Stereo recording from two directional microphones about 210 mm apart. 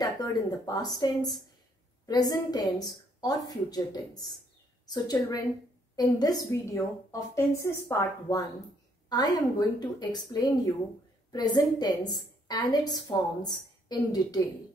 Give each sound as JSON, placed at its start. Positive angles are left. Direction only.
{"t": 0.0, "sound": "a woman's voice", "side_deg": 20}